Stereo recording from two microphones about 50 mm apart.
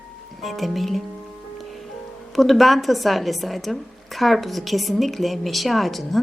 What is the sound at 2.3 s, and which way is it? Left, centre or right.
Speech, centre.